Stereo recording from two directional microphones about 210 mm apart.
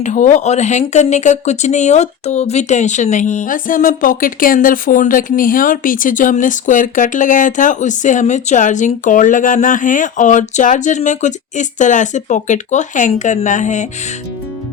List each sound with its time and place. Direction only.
0.0 s speech: 35° left (ahead or behind)